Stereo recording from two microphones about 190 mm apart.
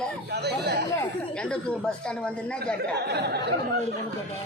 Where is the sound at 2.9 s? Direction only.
60° right (ahead or behind).